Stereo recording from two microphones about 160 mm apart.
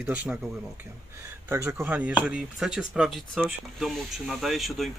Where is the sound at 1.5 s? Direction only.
15° right (ahead or behind).